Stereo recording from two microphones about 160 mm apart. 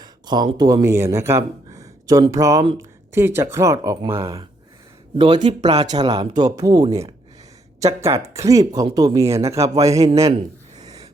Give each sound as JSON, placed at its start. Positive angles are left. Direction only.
{"t": 0.0, "sound": "speech", "side_deg": -25}
{"t": 5.1, "sound": "speech", "side_deg": -30}